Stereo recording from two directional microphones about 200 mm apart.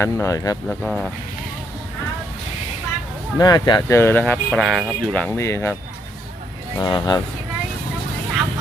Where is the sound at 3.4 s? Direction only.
20° left (ahead or behind).